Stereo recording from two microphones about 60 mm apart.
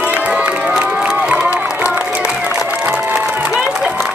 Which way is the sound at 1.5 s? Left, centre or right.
Right.